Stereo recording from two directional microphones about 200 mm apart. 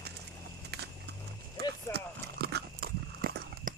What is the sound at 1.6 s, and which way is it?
Horse, 55° right (ahead or behind).